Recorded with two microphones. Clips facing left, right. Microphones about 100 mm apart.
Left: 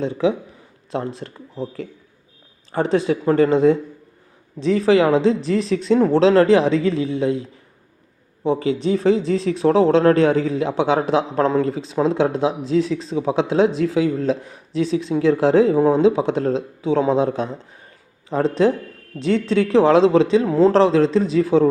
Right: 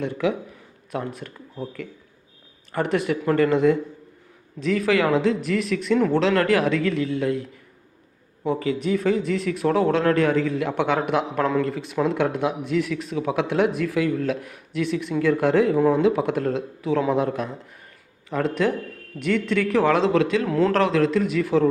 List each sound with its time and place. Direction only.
0.0 s speech: 25° left (ahead or behind)
8.4 s speech: 25° left (ahead or behind)